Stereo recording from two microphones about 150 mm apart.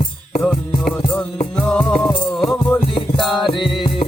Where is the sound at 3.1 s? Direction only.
Centre (ahead or behind).